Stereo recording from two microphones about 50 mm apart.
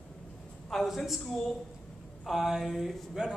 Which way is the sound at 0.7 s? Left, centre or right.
Centre.